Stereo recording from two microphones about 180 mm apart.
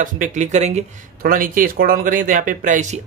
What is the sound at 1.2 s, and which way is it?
Speech, 50° right (ahead or behind).